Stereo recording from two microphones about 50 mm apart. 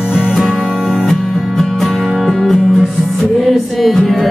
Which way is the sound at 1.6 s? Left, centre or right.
Centre.